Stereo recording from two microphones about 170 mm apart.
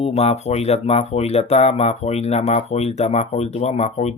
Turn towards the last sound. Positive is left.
turn(degrees=40)  # may be behind; listen again after turning